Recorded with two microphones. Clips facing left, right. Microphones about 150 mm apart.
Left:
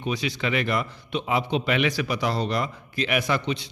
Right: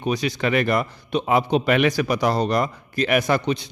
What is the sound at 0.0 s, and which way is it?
A man's voice, 45° right (ahead or behind).